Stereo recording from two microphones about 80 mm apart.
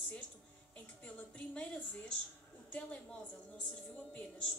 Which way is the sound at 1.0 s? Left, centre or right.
Centre.